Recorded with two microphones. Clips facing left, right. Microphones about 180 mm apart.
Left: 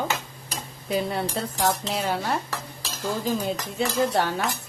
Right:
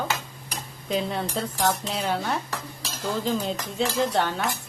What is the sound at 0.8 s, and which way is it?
Speech, 5° left (ahead or behind).